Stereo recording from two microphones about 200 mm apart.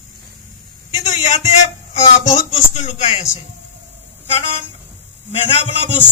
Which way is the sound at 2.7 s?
30° left (ahead or behind).